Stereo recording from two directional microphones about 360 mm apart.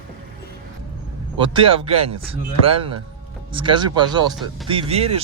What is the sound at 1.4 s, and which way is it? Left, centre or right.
Speech, centre.